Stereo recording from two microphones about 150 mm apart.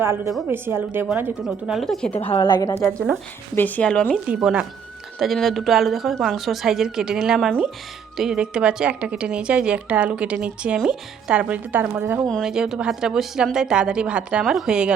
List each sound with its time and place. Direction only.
0.4 s speech: 15° right (ahead or behind)
1.5 s a woman's voice: centre (ahead or behind)
2.3 s a woman's voice: 30° left (ahead or behind); by 4.2 s 5° left (ahead or behind)
4.3 s a woman's voice: 5° right (ahead or behind)
12.3 s a woman's voice: centre (ahead or behind)